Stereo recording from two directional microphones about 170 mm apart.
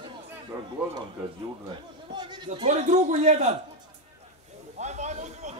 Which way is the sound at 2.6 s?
45° right (ahead or behind).